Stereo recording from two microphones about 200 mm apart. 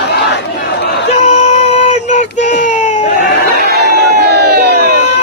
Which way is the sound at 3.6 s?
55° right (ahead or behind).